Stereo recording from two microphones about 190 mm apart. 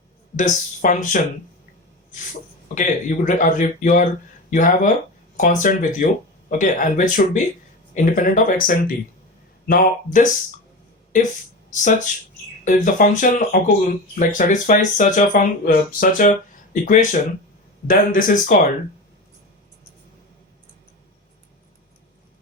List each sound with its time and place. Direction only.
0.3 s speech: 40° left (ahead or behind)
2.7 s speech: 40° left (ahead or behind)
11.8 s speech: 40° left (ahead or behind)